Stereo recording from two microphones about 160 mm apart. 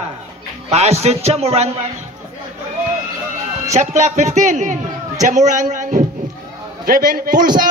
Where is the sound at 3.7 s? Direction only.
50° right (ahead or behind).